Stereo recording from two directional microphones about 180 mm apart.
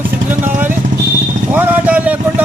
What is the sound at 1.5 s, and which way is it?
Speech, 10° right (ahead or behind).